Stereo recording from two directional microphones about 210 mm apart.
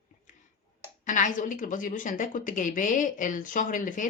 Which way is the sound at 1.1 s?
35° left (ahead or behind).